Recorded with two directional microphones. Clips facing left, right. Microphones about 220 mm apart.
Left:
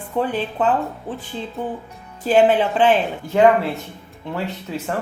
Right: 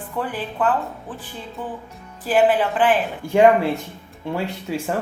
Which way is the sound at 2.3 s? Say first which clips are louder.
Left 2 dB; 25° left (ahead or behind).